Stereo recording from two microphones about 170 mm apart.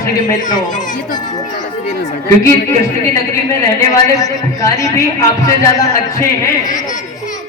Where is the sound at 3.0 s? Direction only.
15° left (ahead or behind).